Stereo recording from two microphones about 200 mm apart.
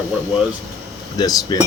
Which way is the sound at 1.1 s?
20° left (ahead or behind).